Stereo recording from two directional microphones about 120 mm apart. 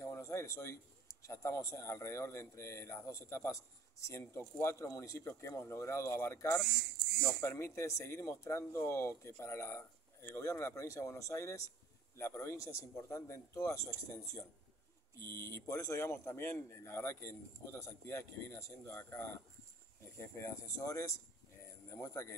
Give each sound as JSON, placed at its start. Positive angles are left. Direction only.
{"t": 0.0, "sound": "a man's voice", "side_deg": 25}